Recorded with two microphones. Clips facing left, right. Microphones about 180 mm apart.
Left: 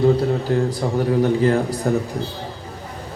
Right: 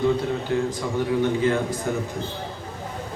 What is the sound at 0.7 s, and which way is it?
A man's voice, 35° left (ahead or behind).